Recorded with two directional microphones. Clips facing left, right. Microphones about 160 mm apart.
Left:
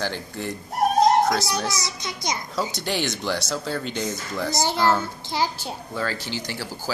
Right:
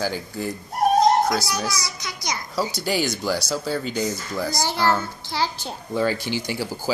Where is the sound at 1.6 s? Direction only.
25° left (ahead or behind).